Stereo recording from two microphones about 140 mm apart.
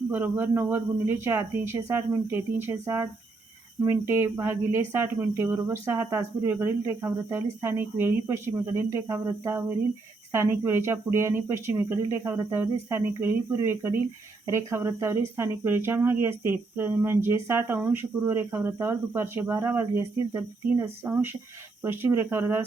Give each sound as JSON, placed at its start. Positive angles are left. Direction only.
{"t": 0.1, "sound": "speech", "side_deg": -15}